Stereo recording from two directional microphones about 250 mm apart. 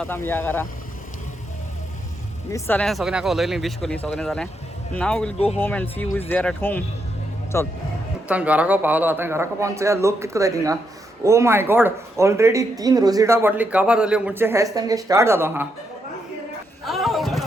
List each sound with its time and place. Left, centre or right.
0.0 s speech: centre
2.5 s speech: centre
8.3 s speech: centre
16.8 s a sound: centre